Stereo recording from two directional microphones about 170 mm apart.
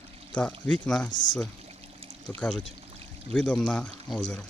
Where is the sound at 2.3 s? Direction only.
5° left (ahead or behind).